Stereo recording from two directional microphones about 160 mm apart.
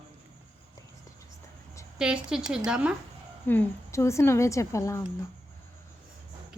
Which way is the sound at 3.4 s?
10° left (ahead or behind).